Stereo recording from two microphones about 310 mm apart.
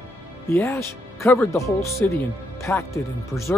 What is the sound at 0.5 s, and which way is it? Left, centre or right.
Speech, centre.